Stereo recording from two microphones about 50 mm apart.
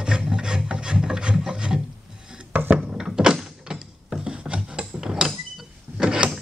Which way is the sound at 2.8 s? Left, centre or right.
Centre.